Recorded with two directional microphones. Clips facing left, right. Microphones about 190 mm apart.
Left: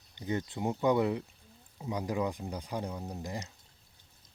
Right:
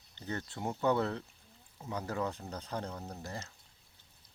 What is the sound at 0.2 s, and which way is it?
Speech, 15° left (ahead or behind).